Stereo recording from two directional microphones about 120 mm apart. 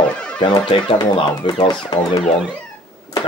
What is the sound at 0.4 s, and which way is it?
Speech, 40° left (ahead or behind).